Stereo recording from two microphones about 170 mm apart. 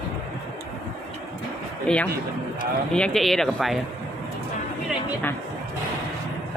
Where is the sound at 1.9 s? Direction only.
5° left (ahead or behind).